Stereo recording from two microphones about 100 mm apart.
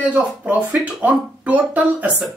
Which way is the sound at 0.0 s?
15° right (ahead or behind).